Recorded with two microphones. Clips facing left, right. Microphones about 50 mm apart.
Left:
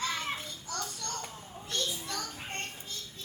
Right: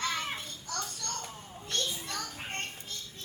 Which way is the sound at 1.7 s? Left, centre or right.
Right.